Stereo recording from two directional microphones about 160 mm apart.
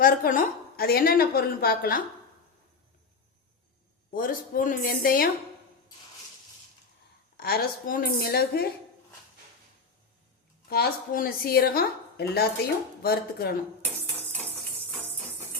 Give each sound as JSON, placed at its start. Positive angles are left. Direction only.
{"t": 0.0, "sound": "a woman's voice", "side_deg": 60}
{"t": 4.1, "sound": "a woman's voice", "side_deg": 60}
{"t": 7.3, "sound": "a woman's voice", "side_deg": 75}
{"t": 10.7, "sound": "a woman's voice", "side_deg": 75}